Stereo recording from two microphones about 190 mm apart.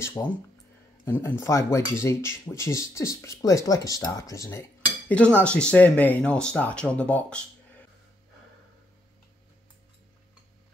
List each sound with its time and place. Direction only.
0.2 s speech: 15° left (ahead or behind)